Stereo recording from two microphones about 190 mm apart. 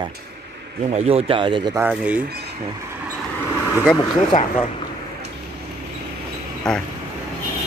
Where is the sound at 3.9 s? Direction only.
25° left (ahead or behind).